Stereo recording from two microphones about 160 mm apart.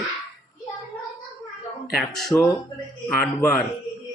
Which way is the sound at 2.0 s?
Centre (ahead or behind).